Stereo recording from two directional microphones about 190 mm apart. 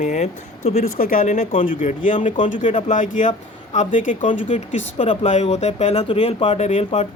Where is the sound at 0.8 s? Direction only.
50° left (ahead or behind).